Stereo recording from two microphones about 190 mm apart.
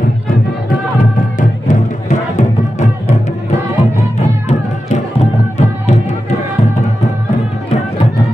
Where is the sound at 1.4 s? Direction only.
40° left (ahead or behind).